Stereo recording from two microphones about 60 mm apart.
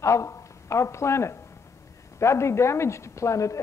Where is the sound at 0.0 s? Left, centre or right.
Left.